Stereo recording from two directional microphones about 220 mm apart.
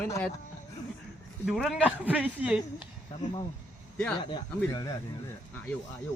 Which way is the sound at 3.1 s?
25° left (ahead or behind).